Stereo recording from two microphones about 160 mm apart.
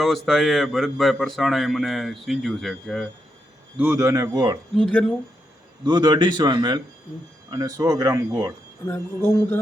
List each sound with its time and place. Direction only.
0.0 s speech: centre (ahead or behind)
3.8 s a man's voice: 15° right (ahead or behind)
4.7 s speech: 5° left (ahead or behind)
5.8 s a man's voice: 25° right (ahead or behind)
8.9 s speech: 10° left (ahead or behind)